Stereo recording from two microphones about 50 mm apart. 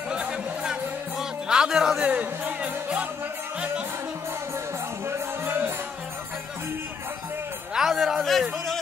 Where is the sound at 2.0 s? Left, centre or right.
Right.